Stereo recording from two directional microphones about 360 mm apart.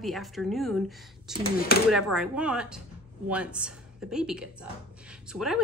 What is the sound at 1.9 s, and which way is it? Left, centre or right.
A woman's voice, centre.